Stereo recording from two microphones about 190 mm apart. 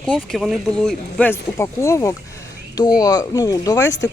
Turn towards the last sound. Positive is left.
turn(degrees=15)  # may be behind; listen again after turning